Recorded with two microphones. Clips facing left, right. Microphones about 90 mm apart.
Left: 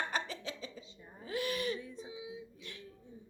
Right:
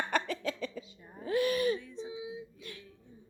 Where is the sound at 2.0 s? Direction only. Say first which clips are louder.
Right 5 dB; 25° right (ahead or behind).